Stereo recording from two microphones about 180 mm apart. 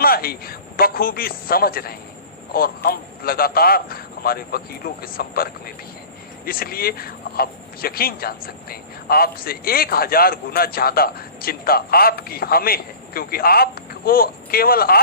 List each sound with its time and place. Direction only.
0.0 s speech: 55° left (ahead or behind)